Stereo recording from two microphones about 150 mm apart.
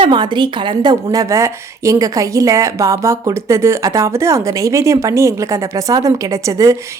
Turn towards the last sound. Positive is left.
turn(degrees=-20)  # may be behind; listen again after turning